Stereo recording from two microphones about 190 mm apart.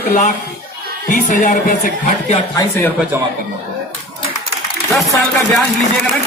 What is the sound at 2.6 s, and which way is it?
Speech, 10° left (ahead or behind).